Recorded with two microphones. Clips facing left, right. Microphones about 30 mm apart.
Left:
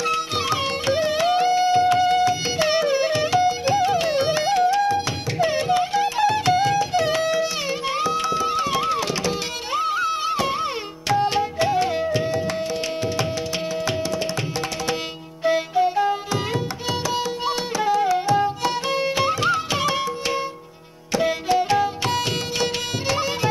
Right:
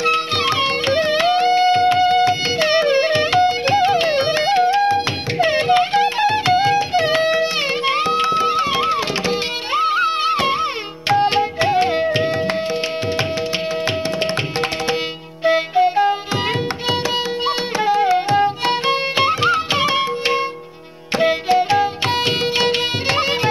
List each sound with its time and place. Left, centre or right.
0.0 s music: right
15.4 s music: right